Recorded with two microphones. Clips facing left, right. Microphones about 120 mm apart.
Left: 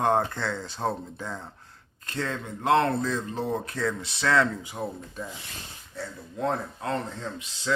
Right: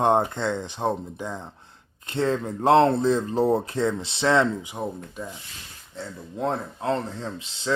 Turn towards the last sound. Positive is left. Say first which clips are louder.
# right 2 dB
turn(degrees=-30)  # may be behind; listen again after turning